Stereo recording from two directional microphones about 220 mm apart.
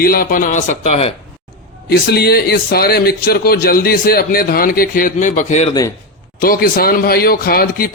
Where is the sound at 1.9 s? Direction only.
45° left (ahead or behind).